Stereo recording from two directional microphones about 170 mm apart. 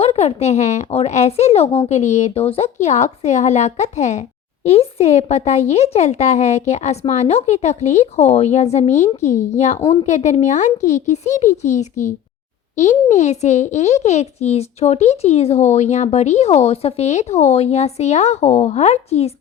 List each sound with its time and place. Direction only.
0.0 s a child's voice: 35° left (ahead or behind)